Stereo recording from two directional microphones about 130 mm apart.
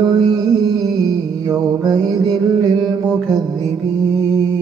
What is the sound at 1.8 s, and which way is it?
Mantra, 30° right (ahead or behind).